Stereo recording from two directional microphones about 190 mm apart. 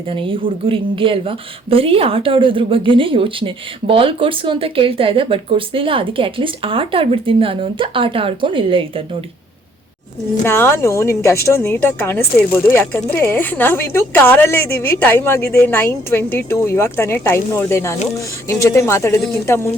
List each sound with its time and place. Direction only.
0.1 s speech: 25° right (ahead or behind)
10.4 s a woman's voice: 10° left (ahead or behind)